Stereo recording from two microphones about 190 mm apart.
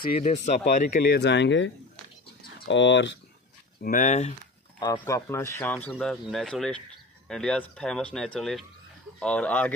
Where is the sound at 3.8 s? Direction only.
45° left (ahead or behind).